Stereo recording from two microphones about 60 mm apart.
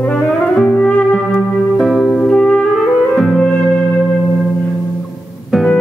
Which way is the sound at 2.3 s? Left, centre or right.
Centre.